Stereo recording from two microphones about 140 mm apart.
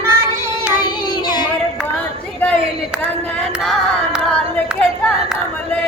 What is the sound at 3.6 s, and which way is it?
Singing, centre (ahead or behind).